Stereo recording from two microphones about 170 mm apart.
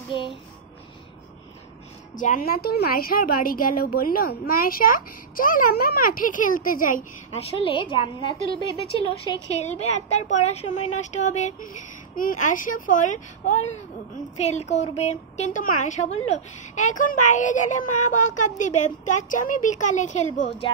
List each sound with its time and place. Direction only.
0.1 s a woman's voice: 30° left (ahead or behind)
2.1 s a woman's voice: 55° left (ahead or behind)
7.4 s a woman's voice: 30° left (ahead or behind)